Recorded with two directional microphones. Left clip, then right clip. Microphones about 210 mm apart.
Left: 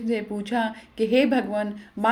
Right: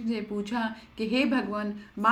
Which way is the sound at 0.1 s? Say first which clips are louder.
Left 6 dB; 10° left (ahead or behind).